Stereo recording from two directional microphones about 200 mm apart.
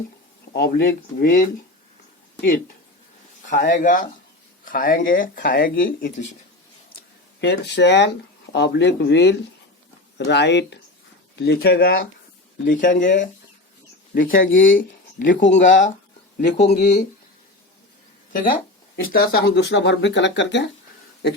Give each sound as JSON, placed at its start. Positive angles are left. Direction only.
{"t": 0.5, "sound": "speech", "side_deg": 45}
{"t": 3.5, "sound": "speech", "side_deg": 40}
{"t": 7.4, "sound": "speech", "side_deg": 60}
{"t": 12.6, "sound": "speech", "side_deg": 40}
{"t": 14.5, "sound": "speech", "side_deg": 70}
{"t": 14.8, "sound": "speech", "side_deg": 40}
{"t": 16.4, "sound": "speech", "side_deg": 55}
{"t": 16.6, "sound": "speech", "side_deg": 35}
{"t": 19.1, "sound": "speech", "side_deg": 50}